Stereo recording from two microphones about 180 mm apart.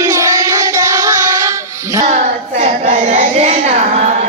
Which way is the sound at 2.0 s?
35° right (ahead or behind).